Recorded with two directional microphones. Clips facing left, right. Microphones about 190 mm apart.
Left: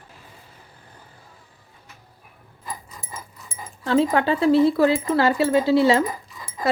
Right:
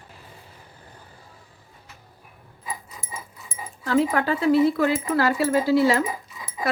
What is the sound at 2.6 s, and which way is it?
Dog, 5° right (ahead or behind).